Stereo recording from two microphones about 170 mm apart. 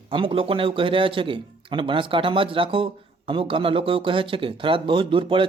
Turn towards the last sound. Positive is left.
turn(degrees=-30)  # may be behind; listen again after turning